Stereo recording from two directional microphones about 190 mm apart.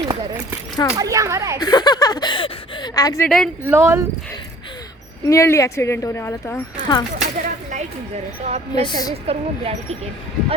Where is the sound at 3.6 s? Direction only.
15° right (ahead or behind).